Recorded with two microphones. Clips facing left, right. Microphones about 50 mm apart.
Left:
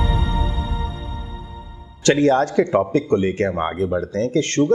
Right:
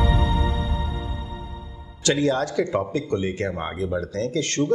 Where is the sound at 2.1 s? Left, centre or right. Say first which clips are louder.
Left 6 dB; left.